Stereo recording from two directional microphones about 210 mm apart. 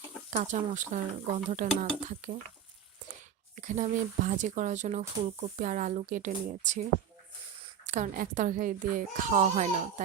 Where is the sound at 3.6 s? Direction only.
35° right (ahead or behind).